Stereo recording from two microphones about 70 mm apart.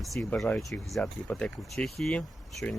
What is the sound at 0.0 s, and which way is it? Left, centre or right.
Speech, centre.